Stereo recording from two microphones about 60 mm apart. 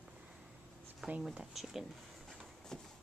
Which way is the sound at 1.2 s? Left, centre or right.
Centre.